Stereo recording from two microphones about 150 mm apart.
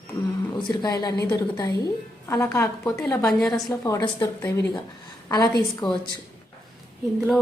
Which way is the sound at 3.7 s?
25° left (ahead or behind).